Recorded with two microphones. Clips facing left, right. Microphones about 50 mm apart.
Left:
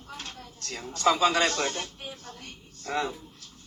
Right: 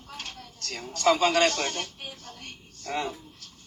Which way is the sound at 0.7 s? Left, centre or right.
Right.